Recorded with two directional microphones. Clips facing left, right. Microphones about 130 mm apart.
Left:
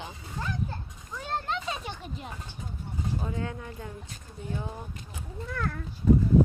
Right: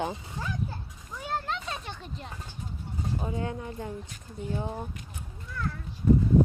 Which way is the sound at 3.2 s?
25° right (ahead or behind).